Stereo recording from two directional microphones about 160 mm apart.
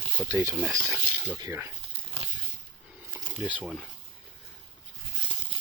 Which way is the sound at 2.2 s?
35° right (ahead or behind).